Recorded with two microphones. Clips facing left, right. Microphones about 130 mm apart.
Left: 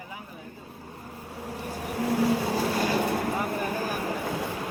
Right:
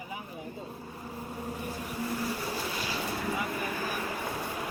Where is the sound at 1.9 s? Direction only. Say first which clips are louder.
Left 10 dB; 80° left.